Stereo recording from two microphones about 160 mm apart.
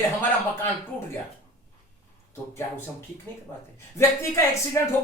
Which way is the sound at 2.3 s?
15° left (ahead or behind).